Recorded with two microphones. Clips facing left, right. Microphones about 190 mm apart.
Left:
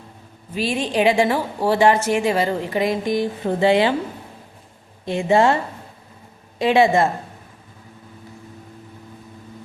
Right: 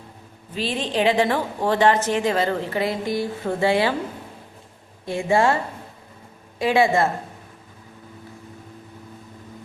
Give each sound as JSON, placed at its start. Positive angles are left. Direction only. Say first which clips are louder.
{"t": 0.5, "sound": "a woman's voice", "louder": "left 3 dB", "side_deg": 10}
{"t": 5.0, "sound": "a woman's voice", "louder": "left 3 dB", "side_deg": 20}
{"t": 6.6, "sound": "a woman's voice", "louder": "left 3 dB", "side_deg": 20}